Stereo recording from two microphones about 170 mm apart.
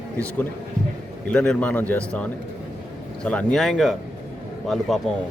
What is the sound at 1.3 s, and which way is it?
Speech, 5° left (ahead or behind).